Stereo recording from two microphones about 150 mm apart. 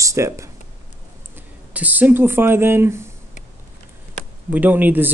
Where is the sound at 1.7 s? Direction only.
10° right (ahead or behind).